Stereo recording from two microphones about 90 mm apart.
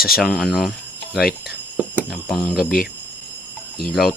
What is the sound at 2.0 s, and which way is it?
Speech, centre (ahead or behind).